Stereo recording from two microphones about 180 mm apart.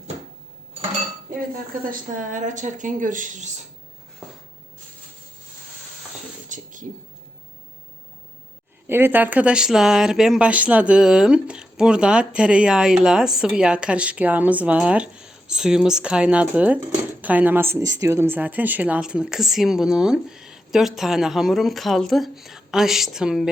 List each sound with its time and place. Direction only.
1.8 s a woman's voice: 50° right (ahead or behind)
6.5 s a sound: 45° right (ahead or behind)
8.9 s speech: 10° right (ahead or behind)